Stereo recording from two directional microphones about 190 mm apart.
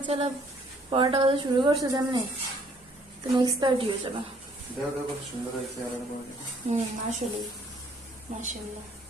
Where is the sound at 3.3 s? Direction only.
25° right (ahead or behind).